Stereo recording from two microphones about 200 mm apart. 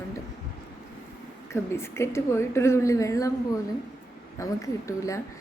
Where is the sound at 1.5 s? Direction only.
10° left (ahead or behind).